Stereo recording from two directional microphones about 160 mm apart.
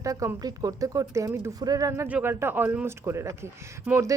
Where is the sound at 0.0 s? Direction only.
20° right (ahead or behind).